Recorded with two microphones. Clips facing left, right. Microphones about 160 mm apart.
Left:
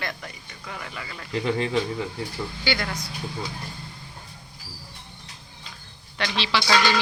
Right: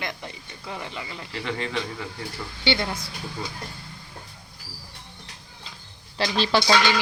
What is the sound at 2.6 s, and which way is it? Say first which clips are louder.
Speech: right 3 dB; 25° right (ahead or behind).